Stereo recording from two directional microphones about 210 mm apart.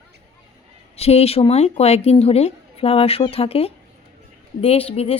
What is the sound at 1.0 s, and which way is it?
Speech, 30° left (ahead or behind).